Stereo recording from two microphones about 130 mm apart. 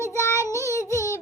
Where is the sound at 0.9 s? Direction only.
25° left (ahead or behind).